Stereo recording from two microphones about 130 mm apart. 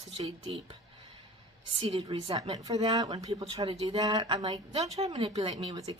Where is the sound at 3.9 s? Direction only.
30° right (ahead or behind).